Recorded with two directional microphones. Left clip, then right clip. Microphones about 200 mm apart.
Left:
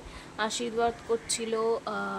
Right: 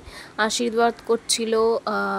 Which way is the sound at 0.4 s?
35° right (ahead or behind).